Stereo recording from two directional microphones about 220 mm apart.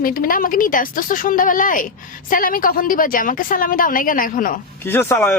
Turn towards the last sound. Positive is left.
turn(degrees=10)  # may be behind; listen again after turning